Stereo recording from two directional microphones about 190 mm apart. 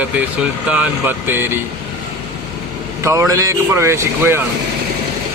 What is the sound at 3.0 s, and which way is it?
Speech, 15° right (ahead or behind).